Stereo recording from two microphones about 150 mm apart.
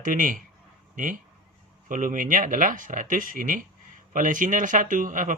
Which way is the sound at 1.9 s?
65° right (ahead or behind).